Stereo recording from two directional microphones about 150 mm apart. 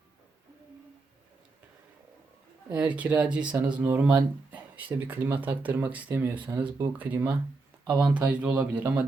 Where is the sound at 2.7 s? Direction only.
10° right (ahead or behind).